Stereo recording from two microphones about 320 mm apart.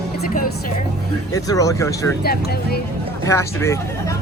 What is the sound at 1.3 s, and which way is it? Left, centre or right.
Speech, centre.